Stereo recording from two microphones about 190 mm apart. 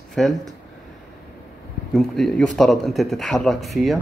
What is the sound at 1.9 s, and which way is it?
Speech, centre (ahead or behind).